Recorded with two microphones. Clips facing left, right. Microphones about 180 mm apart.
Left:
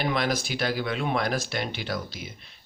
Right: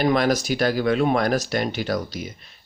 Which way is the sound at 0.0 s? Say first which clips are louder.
Right 7 dB; 45° right (ahead or behind).